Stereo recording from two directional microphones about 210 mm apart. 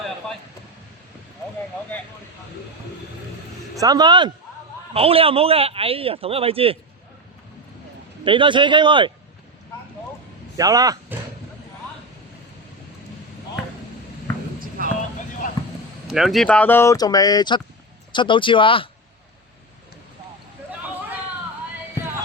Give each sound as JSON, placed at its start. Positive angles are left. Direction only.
{"t": 3.8, "sound": "speech", "side_deg": -20}
{"t": 8.2, "sound": "speech", "side_deg": -25}
{"t": 10.6, "sound": "speech", "side_deg": -15}
{"t": 14.8, "sound": "vehicle", "side_deg": -40}
{"t": 16.0, "sound": "speech", "side_deg": 0}